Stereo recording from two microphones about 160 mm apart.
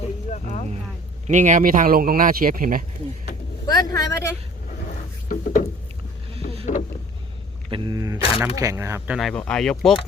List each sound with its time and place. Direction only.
0.3 s vehicle: 50° left (ahead or behind)
1.3 s speech: 50° right (ahead or behind)
3.7 s speech: 25° left (ahead or behind)
5.3 s a sound: 55° left (ahead or behind)
6.3 s boat: 35° right (ahead or behind)
7.7 s speech: 30° right (ahead or behind)
9.1 s speech: centre (ahead or behind)